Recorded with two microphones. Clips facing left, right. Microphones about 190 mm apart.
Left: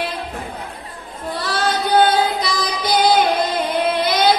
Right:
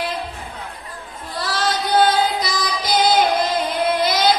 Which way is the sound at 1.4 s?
60° left (ahead or behind).